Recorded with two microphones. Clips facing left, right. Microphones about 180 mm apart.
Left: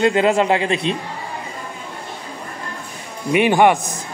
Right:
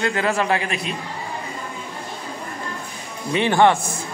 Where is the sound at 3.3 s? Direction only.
15° left (ahead or behind).